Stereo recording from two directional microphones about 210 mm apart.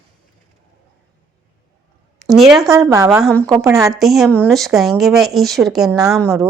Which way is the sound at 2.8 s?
15° right (ahead or behind).